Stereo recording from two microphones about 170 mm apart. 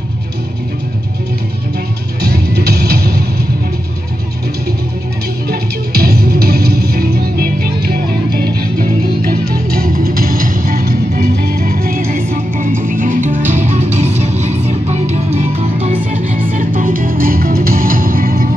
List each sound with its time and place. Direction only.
2.2 s music: 70° right (ahead or behind)
5.5 s music: 65° right (ahead or behind)